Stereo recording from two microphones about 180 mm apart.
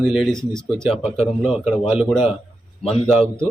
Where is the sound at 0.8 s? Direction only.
Centre (ahead or behind).